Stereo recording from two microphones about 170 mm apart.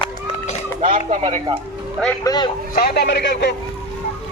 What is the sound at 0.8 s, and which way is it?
Speech, 45° right (ahead or behind).